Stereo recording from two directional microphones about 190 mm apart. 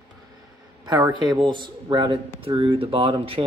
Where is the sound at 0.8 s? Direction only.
20° right (ahead or behind).